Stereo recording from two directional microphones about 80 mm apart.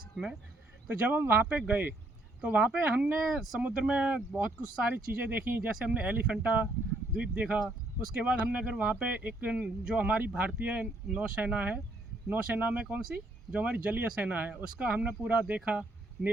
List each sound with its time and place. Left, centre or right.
0.9 s speech: right
3.2 s speech: centre
3.6 s speech: centre